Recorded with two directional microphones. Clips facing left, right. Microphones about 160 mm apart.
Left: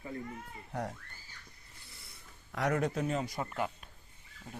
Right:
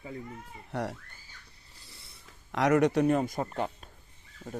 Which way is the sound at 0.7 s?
75° right (ahead or behind).